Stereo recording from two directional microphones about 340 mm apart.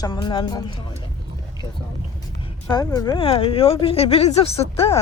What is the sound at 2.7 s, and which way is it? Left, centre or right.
Speech, centre.